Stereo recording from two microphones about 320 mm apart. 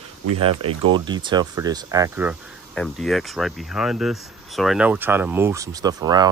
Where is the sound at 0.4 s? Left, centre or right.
Centre.